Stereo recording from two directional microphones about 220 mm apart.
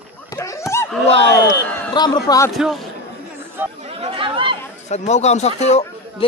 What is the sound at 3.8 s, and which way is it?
Chatter, 25° right (ahead or behind).